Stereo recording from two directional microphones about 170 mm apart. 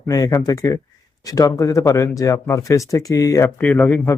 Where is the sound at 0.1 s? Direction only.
20° left (ahead or behind).